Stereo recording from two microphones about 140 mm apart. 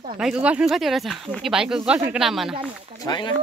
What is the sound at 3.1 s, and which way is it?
Speech, 30° left (ahead or behind).